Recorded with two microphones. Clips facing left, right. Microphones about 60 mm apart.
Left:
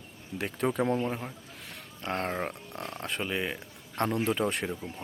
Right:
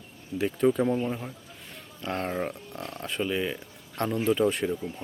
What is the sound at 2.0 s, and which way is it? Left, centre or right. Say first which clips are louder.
Speech: right 2 dB; left.